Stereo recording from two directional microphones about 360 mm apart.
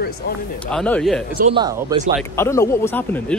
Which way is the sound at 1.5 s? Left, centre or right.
Centre.